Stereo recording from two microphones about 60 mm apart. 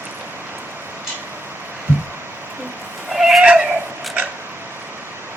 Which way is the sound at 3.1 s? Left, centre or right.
Centre.